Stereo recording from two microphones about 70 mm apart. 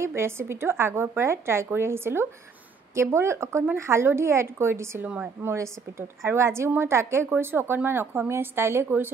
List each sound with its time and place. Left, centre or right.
0.0 s a woman's voice: right
5.0 s a woman's voice: centre
5.4 s a woman's voice: right